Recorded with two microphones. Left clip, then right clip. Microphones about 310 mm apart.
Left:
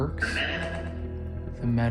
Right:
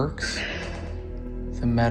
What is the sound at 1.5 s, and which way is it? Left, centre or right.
Speech, centre.